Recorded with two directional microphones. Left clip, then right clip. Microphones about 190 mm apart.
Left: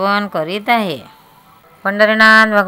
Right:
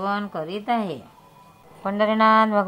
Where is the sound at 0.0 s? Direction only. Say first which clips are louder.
Left 10 dB; 40° left (ahead or behind).